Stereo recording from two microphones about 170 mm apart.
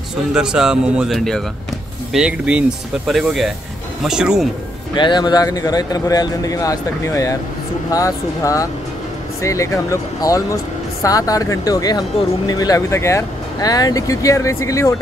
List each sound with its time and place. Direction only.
0.3 s speech: 5° right (ahead or behind)
4.9 s speech: 25° left (ahead or behind)